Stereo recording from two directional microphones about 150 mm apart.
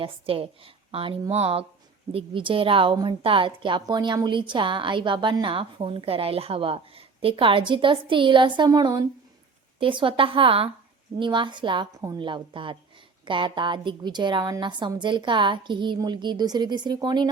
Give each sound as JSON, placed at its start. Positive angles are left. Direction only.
{"t": 0.0, "sound": "a woman's voice", "side_deg": -35}